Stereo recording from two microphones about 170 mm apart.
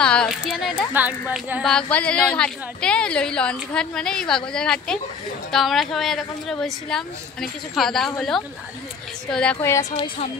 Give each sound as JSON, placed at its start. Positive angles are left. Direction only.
{"t": 0.0, "sound": "a woman's voice", "side_deg": 5}
{"t": 1.6, "sound": "a woman's voice", "side_deg": 5}
{"t": 9.6, "sound": "speech", "side_deg": 20}